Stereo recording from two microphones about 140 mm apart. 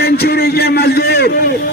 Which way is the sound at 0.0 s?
90° left.